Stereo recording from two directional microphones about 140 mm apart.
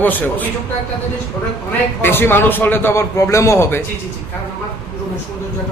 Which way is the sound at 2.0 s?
15° left (ahead or behind).